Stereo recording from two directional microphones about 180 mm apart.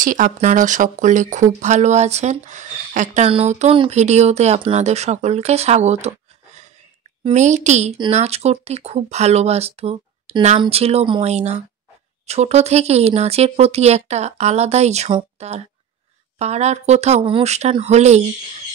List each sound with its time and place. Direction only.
0.0 s speech: 45° right (ahead or behind)
7.2 s speech: 40° right (ahead or behind)